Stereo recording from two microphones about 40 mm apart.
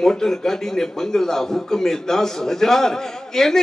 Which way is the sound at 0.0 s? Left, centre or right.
Centre.